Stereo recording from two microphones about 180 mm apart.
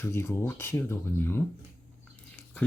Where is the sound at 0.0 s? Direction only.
15° left (ahead or behind).